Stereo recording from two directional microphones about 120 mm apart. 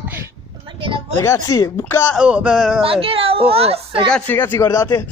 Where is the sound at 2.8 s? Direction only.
50° right (ahead or behind).